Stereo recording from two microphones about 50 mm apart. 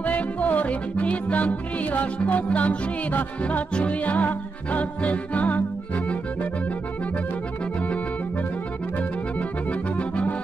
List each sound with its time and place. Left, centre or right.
0.0 s music: left
9.7 s accordion: left